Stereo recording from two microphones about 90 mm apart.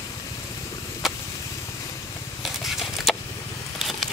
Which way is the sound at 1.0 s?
Centre (ahead or behind).